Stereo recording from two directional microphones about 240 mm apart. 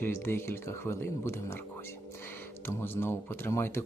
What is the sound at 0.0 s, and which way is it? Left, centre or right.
Speech, centre.